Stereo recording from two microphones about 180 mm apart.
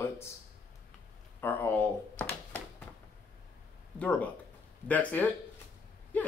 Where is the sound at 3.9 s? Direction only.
10° left (ahead or behind).